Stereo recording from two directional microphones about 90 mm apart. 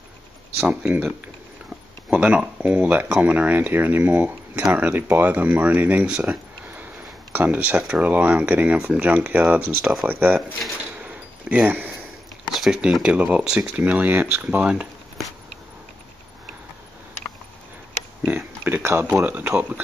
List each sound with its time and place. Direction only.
0.6 s speech: 10° right (ahead or behind)
2.1 s speech: 10° right (ahead or behind)
11.1 s a sound: 15° right (ahead or behind)
12.5 s speech: 5° right (ahead or behind)
18.2 s a sound: 20° right (ahead or behind)
19.2 s speech: 15° right (ahead or behind)